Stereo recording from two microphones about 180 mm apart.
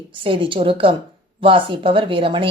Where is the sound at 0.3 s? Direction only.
30° right (ahead or behind).